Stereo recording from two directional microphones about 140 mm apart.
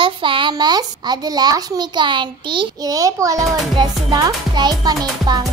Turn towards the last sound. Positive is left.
turn(degrees=-30)  # may be behind; listen again after turning